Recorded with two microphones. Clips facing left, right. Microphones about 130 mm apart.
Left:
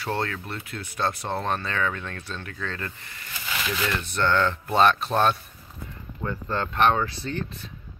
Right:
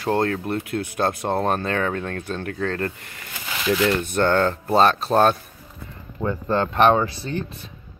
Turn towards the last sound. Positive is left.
turn(degrees=-15)  # may be behind; listen again after turning